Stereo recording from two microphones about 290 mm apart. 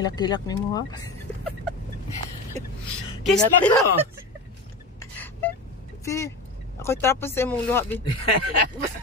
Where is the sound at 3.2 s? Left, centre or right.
Centre.